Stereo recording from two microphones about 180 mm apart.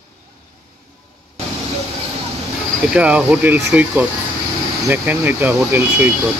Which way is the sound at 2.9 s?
5° right (ahead or behind).